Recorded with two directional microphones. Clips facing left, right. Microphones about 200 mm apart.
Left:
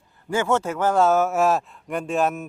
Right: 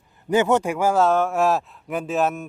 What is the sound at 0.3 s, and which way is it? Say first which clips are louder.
Speech: right 3 dB; 20° right (ahead or behind).